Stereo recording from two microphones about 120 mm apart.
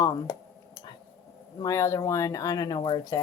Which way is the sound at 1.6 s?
25° left (ahead or behind).